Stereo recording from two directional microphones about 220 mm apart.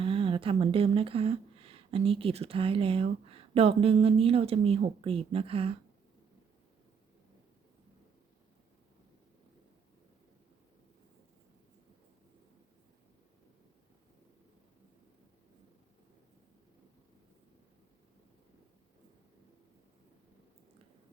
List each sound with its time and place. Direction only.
0.0 s speech: 25° right (ahead or behind)